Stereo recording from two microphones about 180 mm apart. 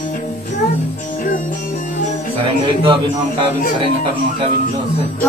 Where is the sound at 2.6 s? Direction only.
30° right (ahead or behind).